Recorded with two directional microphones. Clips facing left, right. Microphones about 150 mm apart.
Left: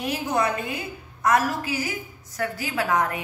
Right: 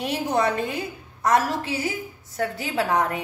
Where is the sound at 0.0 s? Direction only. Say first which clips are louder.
Right 2 dB; 30° right (ahead or behind).